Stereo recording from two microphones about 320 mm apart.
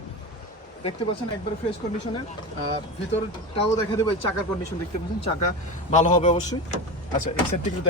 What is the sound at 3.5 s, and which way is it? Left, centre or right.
Speech, centre.